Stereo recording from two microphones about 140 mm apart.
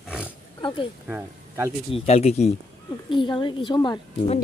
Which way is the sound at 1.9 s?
45° left (ahead or behind).